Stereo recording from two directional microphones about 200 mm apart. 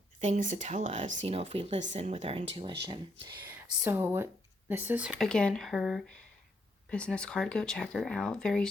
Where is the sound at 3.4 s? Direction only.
10° right (ahead or behind).